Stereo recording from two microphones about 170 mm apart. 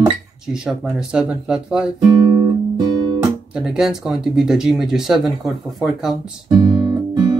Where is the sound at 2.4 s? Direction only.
25° right (ahead or behind).